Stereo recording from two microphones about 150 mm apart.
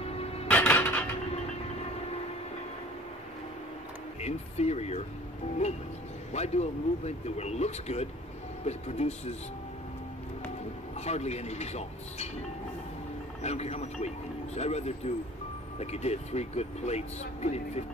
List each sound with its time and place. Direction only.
0.0 s dishes: 40° left (ahead or behind)
0.5 s dishes: 10° left (ahead or behind)
4.2 s speech: 45° left (ahead or behind)
6.3 s speech: 45° left (ahead or behind)
11.0 s speech: 45° left (ahead or behind)
13.4 s speech: 45° left (ahead or behind)